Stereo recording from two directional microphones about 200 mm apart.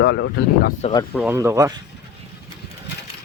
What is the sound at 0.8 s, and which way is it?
Speech, 30° left (ahead or behind).